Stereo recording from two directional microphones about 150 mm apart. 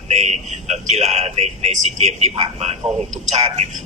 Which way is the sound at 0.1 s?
45° right (ahead or behind).